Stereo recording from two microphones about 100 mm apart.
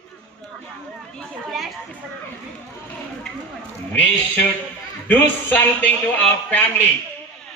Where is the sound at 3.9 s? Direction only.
15° left (ahead or behind).